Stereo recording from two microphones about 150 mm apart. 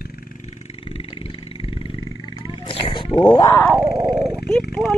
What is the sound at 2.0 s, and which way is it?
Wild animals, 30° right (ahead or behind).